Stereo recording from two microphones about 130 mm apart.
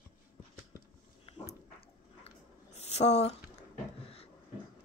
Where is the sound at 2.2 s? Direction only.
55° left (ahead or behind).